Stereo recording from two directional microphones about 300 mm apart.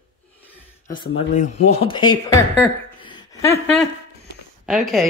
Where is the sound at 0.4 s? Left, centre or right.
Centre.